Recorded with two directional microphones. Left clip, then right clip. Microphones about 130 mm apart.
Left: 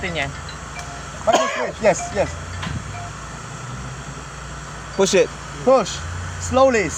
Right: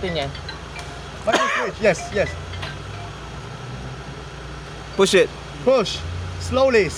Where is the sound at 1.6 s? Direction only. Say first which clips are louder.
Left 1 dB; 55° right (ahead or behind).